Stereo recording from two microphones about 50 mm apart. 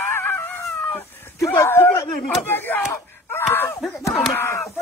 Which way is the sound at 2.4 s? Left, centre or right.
Left.